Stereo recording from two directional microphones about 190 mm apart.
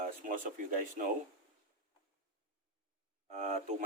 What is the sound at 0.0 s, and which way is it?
Speech, 45° right (ahead or behind).